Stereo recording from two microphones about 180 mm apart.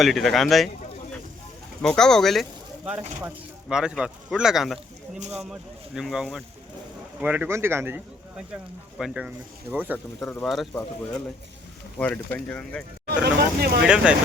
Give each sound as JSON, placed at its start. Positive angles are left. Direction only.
{"t": 0.0, "sound": "speech", "side_deg": 0}
{"t": 1.8, "sound": "speech", "side_deg": 5}
{"t": 10.2, "sound": "speech", "side_deg": 0}
{"t": 11.9, "sound": "speech", "side_deg": 10}
{"t": 13.1, "sound": "speech", "side_deg": -60}
{"t": 13.8, "sound": "speech", "side_deg": -5}